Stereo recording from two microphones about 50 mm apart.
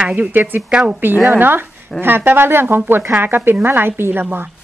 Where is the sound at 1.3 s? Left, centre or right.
Right.